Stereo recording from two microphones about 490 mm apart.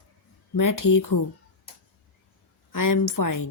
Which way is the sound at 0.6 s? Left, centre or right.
Left.